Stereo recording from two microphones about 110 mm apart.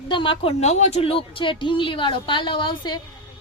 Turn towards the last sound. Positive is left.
turn(degrees=40)  # may be behind; listen again after turning